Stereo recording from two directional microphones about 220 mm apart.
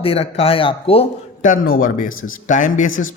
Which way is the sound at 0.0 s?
25° left (ahead or behind).